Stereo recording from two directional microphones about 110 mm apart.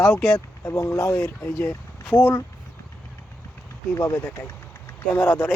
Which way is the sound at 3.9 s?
25° left (ahead or behind).